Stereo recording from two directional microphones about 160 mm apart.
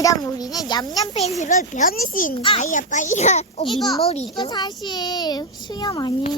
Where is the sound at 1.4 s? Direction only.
50° left (ahead or behind).